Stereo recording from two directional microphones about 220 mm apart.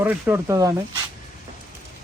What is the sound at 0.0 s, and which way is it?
Speech, 10° right (ahead or behind).